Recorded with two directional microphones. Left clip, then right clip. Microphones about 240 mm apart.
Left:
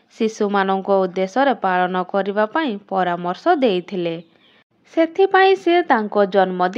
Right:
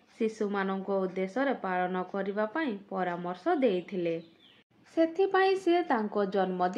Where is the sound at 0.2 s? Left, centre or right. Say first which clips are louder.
Left 12 dB; left.